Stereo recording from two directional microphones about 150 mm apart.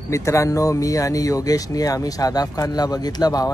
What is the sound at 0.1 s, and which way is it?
Speech, 20° left (ahead or behind).